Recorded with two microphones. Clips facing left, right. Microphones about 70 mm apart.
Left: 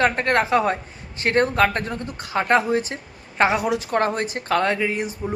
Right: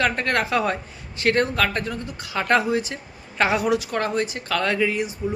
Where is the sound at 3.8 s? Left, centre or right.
Left.